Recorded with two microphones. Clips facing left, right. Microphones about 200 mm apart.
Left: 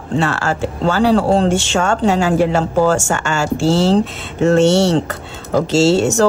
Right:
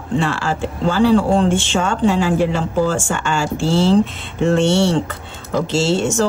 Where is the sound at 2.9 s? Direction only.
45° left (ahead or behind).